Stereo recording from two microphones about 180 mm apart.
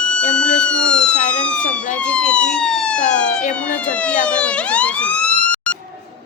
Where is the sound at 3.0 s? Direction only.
45° left (ahead or behind).